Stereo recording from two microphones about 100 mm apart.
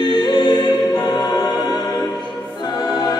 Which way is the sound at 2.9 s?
45° left (ahead or behind).